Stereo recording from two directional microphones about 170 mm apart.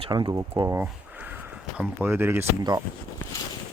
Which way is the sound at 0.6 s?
10° right (ahead or behind).